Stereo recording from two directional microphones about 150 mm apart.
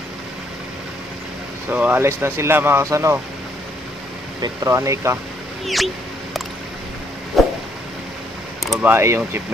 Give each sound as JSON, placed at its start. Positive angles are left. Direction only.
{"t": 1.7, "sound": "speech", "side_deg": -10}
{"t": 4.4, "sound": "speech", "side_deg": -20}
{"t": 7.4, "sound": "a sound", "side_deg": 0}
{"t": 8.8, "sound": "speech", "side_deg": -15}